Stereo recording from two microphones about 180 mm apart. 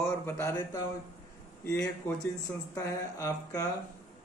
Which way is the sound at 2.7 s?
15° left (ahead or behind).